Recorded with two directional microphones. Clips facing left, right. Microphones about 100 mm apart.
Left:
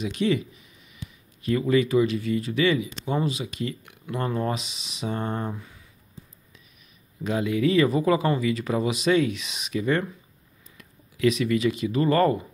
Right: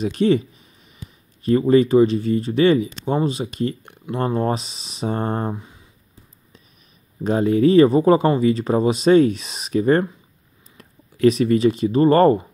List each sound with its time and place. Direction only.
0.0 s speech: 35° right (ahead or behind)
5.6 s a sound: 20° right (ahead or behind)
7.2 s speech: 35° right (ahead or behind)